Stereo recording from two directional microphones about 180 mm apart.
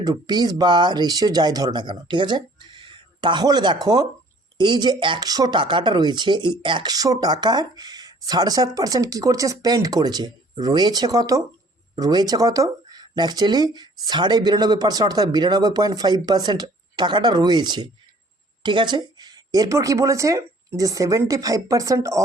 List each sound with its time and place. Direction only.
0.0 s speech: 20° right (ahead or behind)